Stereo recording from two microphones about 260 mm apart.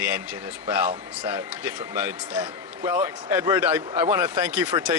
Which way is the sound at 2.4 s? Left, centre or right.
Centre.